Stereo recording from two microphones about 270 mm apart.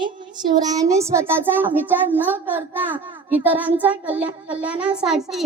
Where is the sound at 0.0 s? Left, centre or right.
Centre.